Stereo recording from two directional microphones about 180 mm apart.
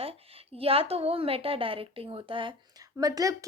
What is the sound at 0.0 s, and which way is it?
A woman's voice, 35° right (ahead or behind).